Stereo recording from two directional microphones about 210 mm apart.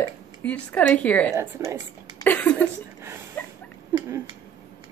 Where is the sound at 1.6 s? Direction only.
15° right (ahead or behind).